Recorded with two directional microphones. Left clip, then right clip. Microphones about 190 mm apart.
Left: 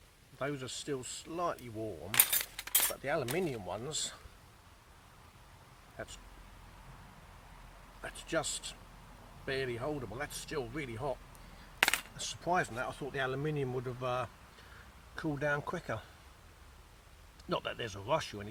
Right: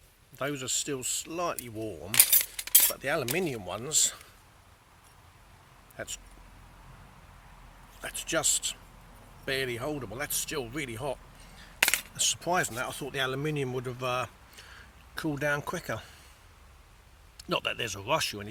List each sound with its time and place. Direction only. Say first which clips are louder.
0.3 s speech: right 6 dB; 20° right (ahead or behind)
2.1 s a sound: right 6 dB; 10° left (ahead or behind)
2.9 s speech: right 5 dB; 25° right (ahead or behind)
6.0 s speech: right 6 dB; 20° right (ahead or behind)
8.0 s speech: right 6 dB; 20° right (ahead or behind)
11.8 s coin: right 3 dB; 10° left (ahead or behind)
12.1 s speech: right 5 dB; 25° right (ahead or behind)
17.3 s speech: right 6 dB; 20° right (ahead or behind)